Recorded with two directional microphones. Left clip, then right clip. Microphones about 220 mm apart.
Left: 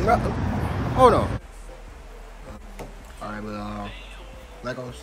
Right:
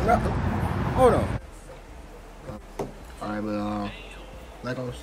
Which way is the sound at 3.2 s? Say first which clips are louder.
Right 3 dB; 5° right (ahead or behind).